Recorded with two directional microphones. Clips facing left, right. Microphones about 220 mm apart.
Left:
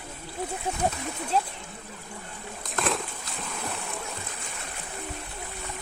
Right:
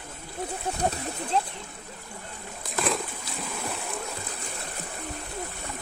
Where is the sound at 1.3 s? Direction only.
5° left (ahead or behind).